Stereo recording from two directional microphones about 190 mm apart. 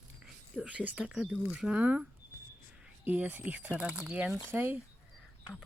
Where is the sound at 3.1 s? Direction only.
10° right (ahead or behind).